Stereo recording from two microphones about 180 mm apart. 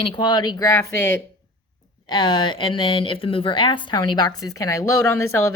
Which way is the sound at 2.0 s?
25° left (ahead or behind).